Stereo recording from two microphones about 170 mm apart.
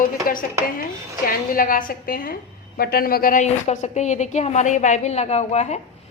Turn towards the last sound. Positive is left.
turn(degrees=40)  # may be behind; listen again after turning